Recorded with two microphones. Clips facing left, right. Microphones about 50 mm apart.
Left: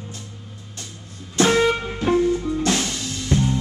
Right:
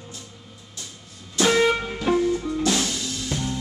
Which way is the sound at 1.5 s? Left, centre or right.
Centre.